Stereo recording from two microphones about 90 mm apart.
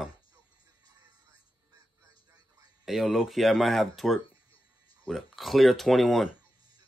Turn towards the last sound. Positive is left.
turn(degrees=0)  # may be behind; listen again after turning